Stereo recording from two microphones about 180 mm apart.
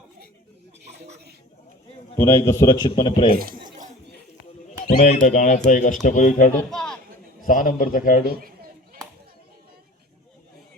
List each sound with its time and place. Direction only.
2.1 s a man's voice: 15° left (ahead or behind)
4.9 s speech: 45° left (ahead or behind)
6.5 s a sound: 5° left (ahead or behind)
7.4 s speech: 50° left (ahead or behind)
8.4 s children playing: 55° right (ahead or behind)